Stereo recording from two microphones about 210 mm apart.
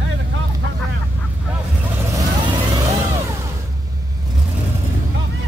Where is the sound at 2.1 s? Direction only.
20° right (ahead or behind).